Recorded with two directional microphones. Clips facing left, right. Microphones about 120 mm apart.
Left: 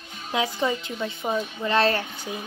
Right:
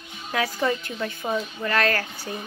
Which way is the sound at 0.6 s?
15° left (ahead or behind).